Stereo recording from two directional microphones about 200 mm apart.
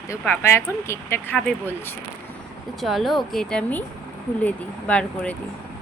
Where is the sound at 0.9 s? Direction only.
10° left (ahead or behind).